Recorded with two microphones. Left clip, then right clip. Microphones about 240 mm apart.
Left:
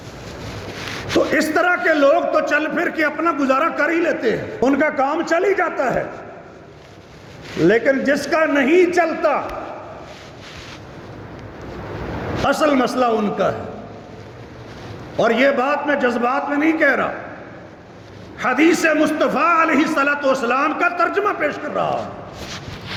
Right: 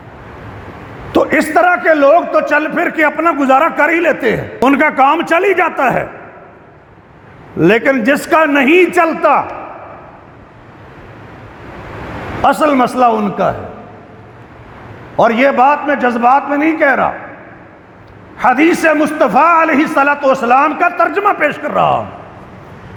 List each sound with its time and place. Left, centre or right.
1.3 s a man's voice: right
7.6 s a man's voice: right
12.5 s a man's voice: right
15.2 s a man's voice: right
18.3 s a man's voice: right